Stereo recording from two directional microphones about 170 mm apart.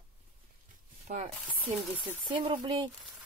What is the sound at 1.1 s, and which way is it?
Speech, 50° right (ahead or behind).